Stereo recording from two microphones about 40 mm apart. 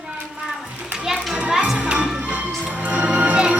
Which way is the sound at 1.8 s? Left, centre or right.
Right.